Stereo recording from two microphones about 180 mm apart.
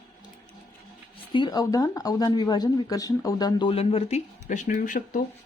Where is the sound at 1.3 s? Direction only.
25° left (ahead or behind); by 5.2 s 50° left (ahead or behind).